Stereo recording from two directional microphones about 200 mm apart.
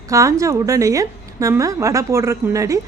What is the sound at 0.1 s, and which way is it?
A woman's voice, 15° right (ahead or behind).